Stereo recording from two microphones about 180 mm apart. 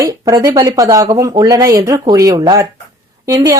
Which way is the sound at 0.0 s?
20° right (ahead or behind).